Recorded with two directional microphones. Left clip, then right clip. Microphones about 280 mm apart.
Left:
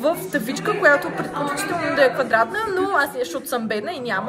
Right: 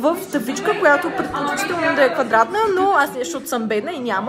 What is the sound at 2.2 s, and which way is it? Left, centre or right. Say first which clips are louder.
A woman's voice: right 4 dB; centre.